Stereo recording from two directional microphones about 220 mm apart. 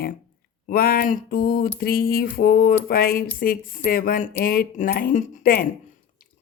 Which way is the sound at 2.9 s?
40° left (ahead or behind).